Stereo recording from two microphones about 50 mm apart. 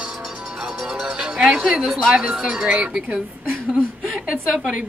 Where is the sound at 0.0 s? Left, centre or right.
Centre.